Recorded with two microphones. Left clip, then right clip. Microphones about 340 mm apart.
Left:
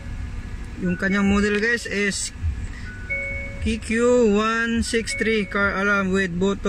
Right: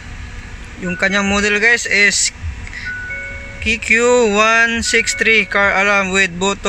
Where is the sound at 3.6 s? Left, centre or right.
Centre.